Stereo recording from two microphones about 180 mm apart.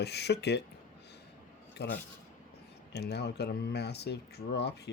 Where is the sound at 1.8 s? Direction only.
70° left (ahead or behind).